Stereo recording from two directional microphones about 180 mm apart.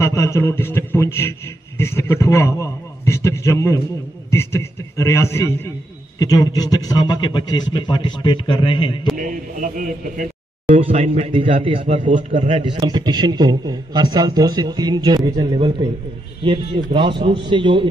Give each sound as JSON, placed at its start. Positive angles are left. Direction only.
{"t": 0.0, "sound": "a man's voice", "side_deg": 15}
{"t": 9.1, "sound": "a man's voice", "side_deg": -45}
{"t": 10.8, "sound": "a man's voice", "side_deg": -35}
{"t": 11.8, "sound": "a man's voice", "side_deg": -45}
{"t": 12.6, "sound": "a man's voice", "side_deg": -25}